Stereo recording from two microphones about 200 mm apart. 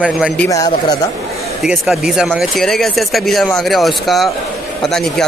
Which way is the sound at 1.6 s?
Centre (ahead or behind).